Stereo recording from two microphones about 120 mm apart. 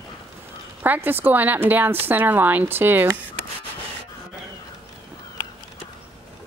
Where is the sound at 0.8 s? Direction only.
15° right (ahead or behind).